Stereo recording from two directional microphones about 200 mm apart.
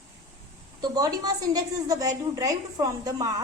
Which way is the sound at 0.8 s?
20° right (ahead or behind).